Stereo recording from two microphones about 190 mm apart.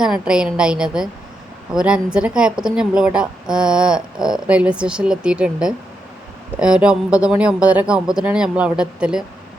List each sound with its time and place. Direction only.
0.0 s speech: 5° right (ahead or behind)